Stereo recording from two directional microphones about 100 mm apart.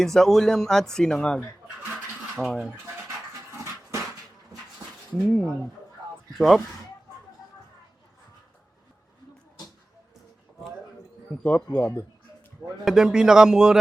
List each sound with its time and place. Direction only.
0.0 s speech: 5° left (ahead or behind)
2.5 s speech: 5° left (ahead or behind)
3.1 s dog: 30° right (ahead or behind)
5.1 s speech: 5° left (ahead or behind)
11.4 s speech: 15° left (ahead or behind)
12.8 s speech: 5° right (ahead or behind)